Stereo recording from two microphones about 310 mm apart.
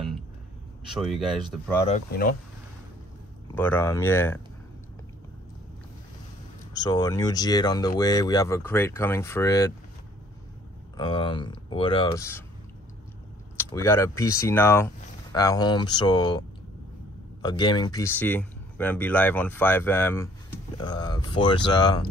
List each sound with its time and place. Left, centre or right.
1.0 s speech: centre
1.9 s speech: left
3.5 s speech: centre
6.7 s speech: centre
11.0 s speech: centre
13.6 s speech: centre